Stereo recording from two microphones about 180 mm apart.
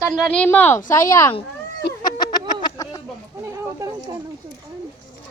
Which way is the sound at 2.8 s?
15° left (ahead or behind).